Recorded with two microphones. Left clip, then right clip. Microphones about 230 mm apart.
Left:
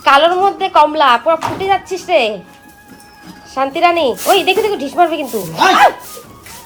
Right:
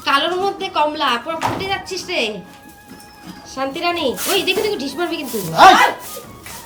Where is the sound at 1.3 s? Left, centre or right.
Centre.